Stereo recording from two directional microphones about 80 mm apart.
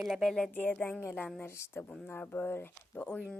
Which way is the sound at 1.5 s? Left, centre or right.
Left.